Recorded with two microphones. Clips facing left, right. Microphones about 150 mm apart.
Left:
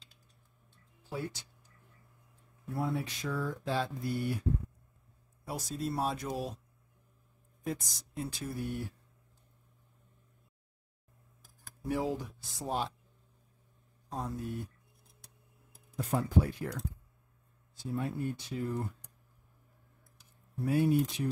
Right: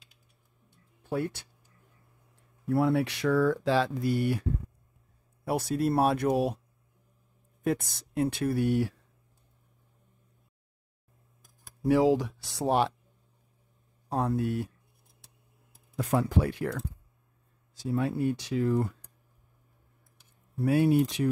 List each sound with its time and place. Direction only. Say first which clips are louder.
1.0 s speech: right 8 dB; 60° right (ahead or behind)
2.7 s mantra: right 9 dB; 75° right (ahead or behind)
5.4 s speech: right 9 dB; 65° right (ahead or behind)
7.6 s speech: right 9 dB; 65° right (ahead or behind); by 8.9 s 85° right
11.8 s speech: right 11 dB; 90° right; by 12.9 s 70° right (ahead or behind)
14.0 s mantra: right 10 dB; 65° right (ahead or behind)
16.0 s speech: right 4 dB; 85° right
17.7 s speech: right 7 dB; 90° right
20.5 s speech: right 5 dB; 80° right